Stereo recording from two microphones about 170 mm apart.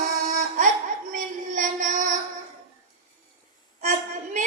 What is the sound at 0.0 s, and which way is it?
Music, 50° right (ahead or behind).